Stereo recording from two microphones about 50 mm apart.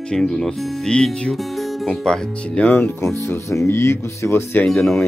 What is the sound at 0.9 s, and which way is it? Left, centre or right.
Speech, centre.